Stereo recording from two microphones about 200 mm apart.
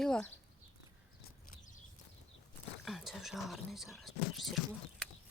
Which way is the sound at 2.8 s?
Centre (ahead or behind).